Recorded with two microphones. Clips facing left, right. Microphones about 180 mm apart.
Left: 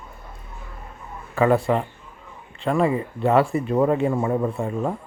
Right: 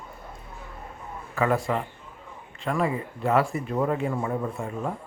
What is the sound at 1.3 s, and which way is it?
Speech, 30° left (ahead or behind).